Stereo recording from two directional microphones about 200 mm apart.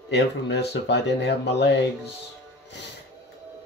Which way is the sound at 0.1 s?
60° left (ahead or behind).